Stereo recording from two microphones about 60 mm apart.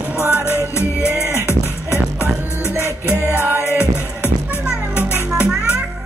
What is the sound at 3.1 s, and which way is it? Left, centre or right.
Music, left.